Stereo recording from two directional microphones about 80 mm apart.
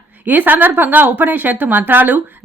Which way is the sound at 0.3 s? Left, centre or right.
Right.